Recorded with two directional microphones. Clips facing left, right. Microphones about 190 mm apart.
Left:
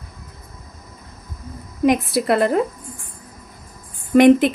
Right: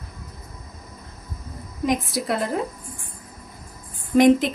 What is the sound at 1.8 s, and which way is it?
Speech, 65° left (ahead or behind).